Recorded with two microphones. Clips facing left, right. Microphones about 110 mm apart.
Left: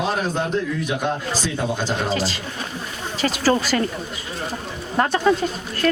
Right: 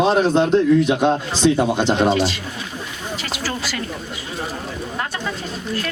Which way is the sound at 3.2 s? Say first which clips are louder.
Left 9 dB; 40° left (ahead or behind).